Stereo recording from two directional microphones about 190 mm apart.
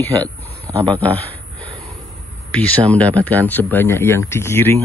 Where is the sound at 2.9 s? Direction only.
5° left (ahead or behind).